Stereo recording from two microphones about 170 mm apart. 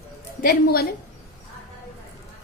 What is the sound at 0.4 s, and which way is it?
Speech, 65° left (ahead or behind).